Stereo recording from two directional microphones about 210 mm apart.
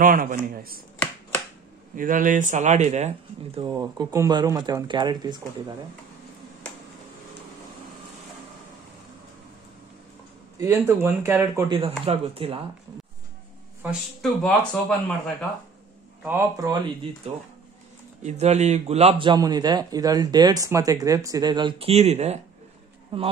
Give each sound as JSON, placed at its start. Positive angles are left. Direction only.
{"t": 0.0, "sound": "speech", "side_deg": -40}
{"t": 2.0, "sound": "speech", "side_deg": -40}
{"t": 3.6, "sound": "a man's voice", "side_deg": -20}
{"t": 10.6, "sound": "speech", "side_deg": -10}
{"t": 12.1, "sound": "a man's voice", "side_deg": -25}
{"t": 13.8, "sound": "a man's voice", "side_deg": 5}
{"t": 16.3, "sound": "speech", "side_deg": -15}
{"t": 18.2, "sound": "a man's voice", "side_deg": -35}